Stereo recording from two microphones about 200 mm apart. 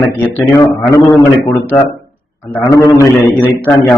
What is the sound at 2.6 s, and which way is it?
Speech, 15° left (ahead or behind).